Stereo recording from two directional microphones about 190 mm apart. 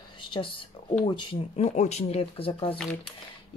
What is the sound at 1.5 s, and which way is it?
Speech, 35° left (ahead or behind).